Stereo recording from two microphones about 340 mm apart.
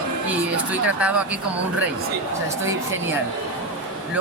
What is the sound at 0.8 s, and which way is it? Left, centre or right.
Speech, centre.